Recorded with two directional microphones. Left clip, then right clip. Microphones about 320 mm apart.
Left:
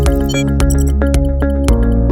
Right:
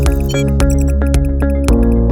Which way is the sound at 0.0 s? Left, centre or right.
Centre.